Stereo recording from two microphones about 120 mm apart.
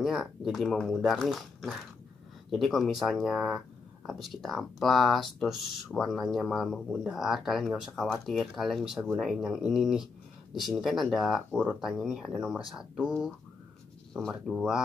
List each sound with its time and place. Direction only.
0.0 s speech: centre (ahead or behind)
14.4 s speech: 5° right (ahead or behind)